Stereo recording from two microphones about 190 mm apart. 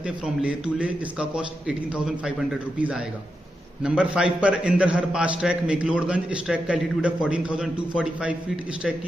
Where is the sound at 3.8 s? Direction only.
5° right (ahead or behind).